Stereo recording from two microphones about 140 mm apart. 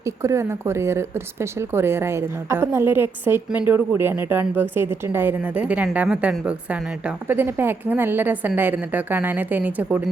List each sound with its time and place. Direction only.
0.0 s a woman's voice: 20° right (ahead or behind)